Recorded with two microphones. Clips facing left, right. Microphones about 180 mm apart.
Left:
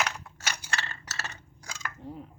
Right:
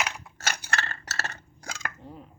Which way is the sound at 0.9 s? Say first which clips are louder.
Right 4 dB; 65° right (ahead or behind).